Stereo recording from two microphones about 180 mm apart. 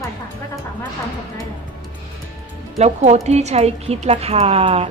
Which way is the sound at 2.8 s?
40° right (ahead or behind).